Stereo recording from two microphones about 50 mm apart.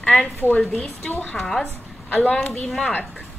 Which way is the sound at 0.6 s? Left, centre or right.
Centre.